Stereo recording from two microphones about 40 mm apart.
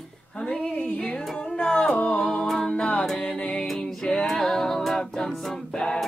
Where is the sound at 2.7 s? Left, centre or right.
Centre.